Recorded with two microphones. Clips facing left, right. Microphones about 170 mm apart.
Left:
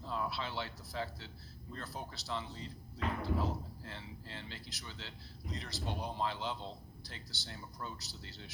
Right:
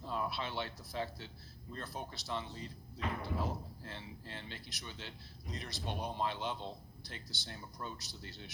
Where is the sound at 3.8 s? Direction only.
20° right (ahead or behind).